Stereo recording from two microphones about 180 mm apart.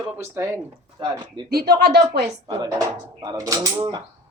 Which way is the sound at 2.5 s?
20° right (ahead or behind).